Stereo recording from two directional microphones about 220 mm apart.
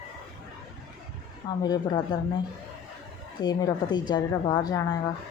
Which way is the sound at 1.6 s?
20° left (ahead or behind).